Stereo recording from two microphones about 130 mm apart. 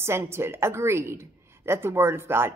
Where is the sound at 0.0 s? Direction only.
20° right (ahead or behind).